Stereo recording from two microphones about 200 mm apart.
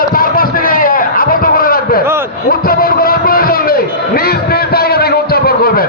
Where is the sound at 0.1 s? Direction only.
45° left (ahead or behind).